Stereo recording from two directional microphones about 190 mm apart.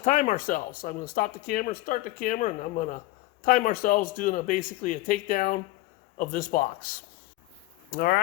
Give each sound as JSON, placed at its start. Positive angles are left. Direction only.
{"t": 0.0, "sound": "speech", "side_deg": 40}